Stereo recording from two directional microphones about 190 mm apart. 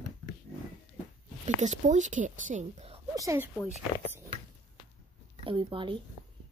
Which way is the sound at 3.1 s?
15° right (ahead or behind).